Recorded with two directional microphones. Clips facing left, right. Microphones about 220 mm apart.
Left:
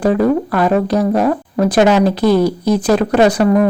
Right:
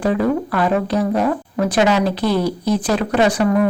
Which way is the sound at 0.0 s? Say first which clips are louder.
Left 4 dB; 40° left (ahead or behind).